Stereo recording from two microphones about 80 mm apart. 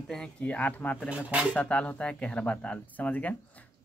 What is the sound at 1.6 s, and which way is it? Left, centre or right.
Speech, centre.